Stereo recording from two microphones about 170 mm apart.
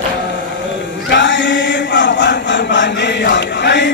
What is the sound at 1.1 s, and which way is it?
Chant, 90° left.